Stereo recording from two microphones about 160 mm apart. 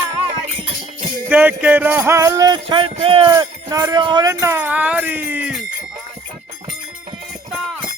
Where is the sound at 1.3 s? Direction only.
10° right (ahead or behind); by 3.3 s 35° right (ahead or behind).